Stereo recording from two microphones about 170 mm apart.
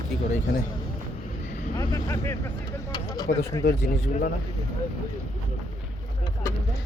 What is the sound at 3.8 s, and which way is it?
Speech, 55° left (ahead or behind).